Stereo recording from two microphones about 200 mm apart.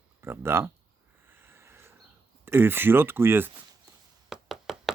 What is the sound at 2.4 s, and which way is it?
Speech, 10° right (ahead or behind).